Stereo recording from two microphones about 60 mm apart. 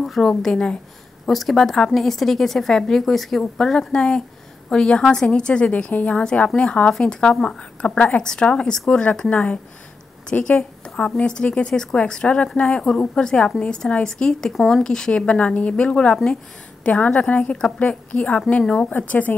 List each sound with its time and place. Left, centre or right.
0.0 s a woman's voice: centre; by 10.5 s left
11.0 s a woman's voice: centre
18.9 s a woman's voice: left